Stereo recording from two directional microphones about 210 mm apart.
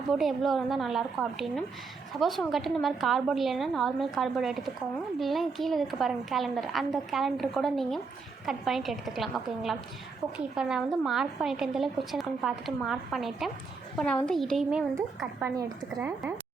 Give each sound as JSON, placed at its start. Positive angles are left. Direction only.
{"t": 0.1, "sound": "a woman's voice", "side_deg": 0}